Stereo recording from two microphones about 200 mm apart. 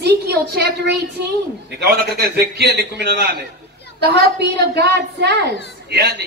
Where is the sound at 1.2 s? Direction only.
55° right (ahead or behind).